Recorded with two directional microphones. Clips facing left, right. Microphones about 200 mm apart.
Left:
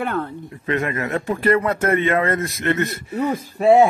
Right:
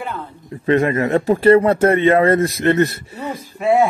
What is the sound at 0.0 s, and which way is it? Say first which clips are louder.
Speech: left 5 dB; 60° left (ahead or behind).